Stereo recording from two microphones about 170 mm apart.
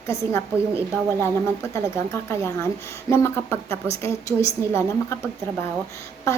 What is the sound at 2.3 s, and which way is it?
A woman's voice, 15° left (ahead or behind).